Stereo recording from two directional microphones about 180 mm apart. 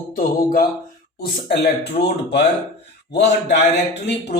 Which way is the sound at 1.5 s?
65° left (ahead or behind).